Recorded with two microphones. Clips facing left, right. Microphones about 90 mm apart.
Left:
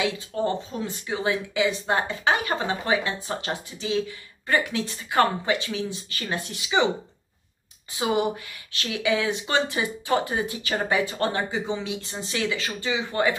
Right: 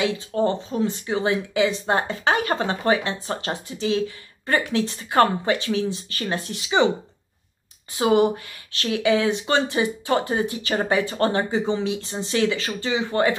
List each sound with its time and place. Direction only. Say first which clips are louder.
0.0 s speech: right 4 dB; 35° right (ahead or behind)
8.0 s speech: right 6 dB; 35° right (ahead or behind)